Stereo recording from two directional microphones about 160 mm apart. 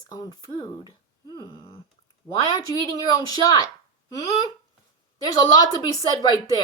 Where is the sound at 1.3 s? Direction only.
35° left (ahead or behind).